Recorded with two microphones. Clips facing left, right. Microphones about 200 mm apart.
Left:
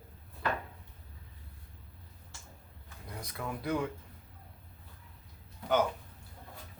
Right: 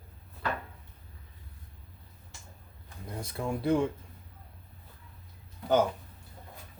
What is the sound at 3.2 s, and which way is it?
Speech, 30° right (ahead or behind).